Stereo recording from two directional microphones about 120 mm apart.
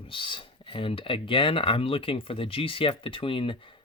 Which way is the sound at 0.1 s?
45° left (ahead or behind).